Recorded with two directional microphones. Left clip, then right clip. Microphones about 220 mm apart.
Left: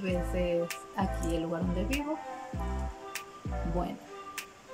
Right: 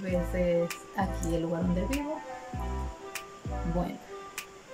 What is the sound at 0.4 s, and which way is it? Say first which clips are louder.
Speech: right 4 dB; 5° left (ahead or behind).